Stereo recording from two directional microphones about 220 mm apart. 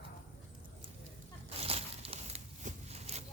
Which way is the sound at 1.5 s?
25° right (ahead or behind).